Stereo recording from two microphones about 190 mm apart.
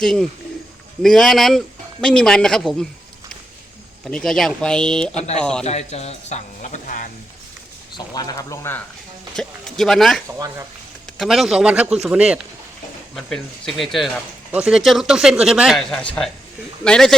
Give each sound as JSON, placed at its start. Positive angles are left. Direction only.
{"t": 0.0, "sound": "speech", "side_deg": 5}
{"t": 4.0, "sound": "speech", "side_deg": 0}
{"t": 5.1, "sound": "speech", "side_deg": 35}
{"t": 5.4, "sound": "speech", "side_deg": 5}
{"t": 5.6, "sound": "speech", "side_deg": 35}
{"t": 7.9, "sound": "speech", "side_deg": 20}
{"t": 9.3, "sound": "speech", "side_deg": 0}